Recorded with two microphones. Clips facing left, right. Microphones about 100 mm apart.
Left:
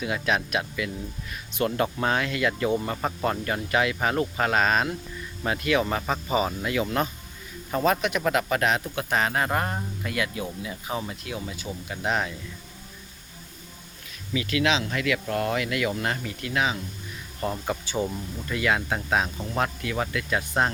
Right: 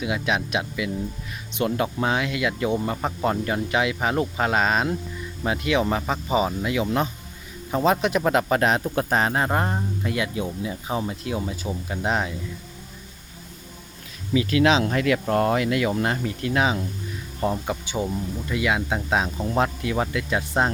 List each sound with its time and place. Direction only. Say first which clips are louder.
0.0 s speech: right 1 dB; 15° right (ahead or behind)
8.0 s speech: right 4 dB; 30° right (ahead or behind)
14.3 s speech: right 6 dB; 30° right (ahead or behind)
17.4 s speech: right 3 dB; 15° right (ahead or behind)